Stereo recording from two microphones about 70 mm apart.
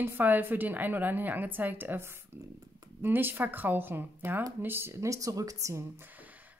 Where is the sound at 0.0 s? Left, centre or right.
Right.